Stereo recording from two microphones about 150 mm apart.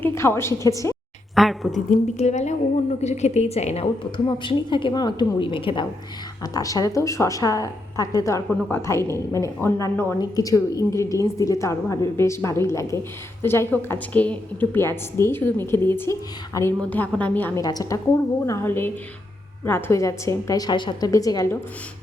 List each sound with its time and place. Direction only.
0.0 s a woman's voice: 15° left (ahead or behind)
1.4 s a woman's voice: centre (ahead or behind)
2.1 s a woman's voice: 50° left (ahead or behind)
4.0 s a woman's voice: 35° left (ahead or behind)
6.4 s a woman's voice: 25° left (ahead or behind)
17.6 s a woman's voice: 25° left (ahead or behind)